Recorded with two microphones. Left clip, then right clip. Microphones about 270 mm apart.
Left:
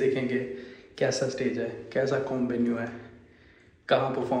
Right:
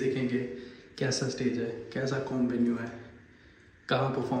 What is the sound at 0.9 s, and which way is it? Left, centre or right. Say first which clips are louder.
A man's voice: left 5 dB; centre.